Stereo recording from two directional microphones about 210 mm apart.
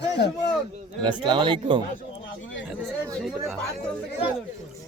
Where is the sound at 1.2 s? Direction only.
20° right (ahead or behind).